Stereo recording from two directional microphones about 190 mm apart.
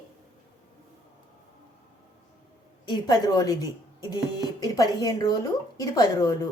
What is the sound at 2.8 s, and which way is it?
A woman's voice, 20° left (ahead or behind).